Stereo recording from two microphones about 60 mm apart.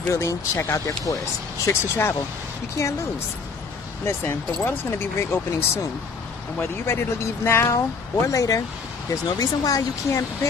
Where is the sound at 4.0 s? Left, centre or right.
Left.